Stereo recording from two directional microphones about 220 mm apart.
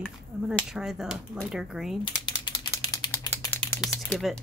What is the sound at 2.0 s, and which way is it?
Typing, 20° left (ahead or behind).